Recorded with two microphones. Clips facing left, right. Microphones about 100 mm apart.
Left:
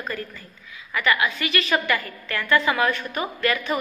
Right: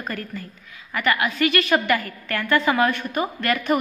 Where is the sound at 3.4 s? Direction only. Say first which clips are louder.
Right 2 dB; 50° right (ahead or behind).